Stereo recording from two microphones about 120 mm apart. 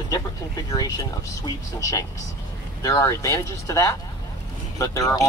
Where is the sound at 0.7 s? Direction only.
30° left (ahead or behind).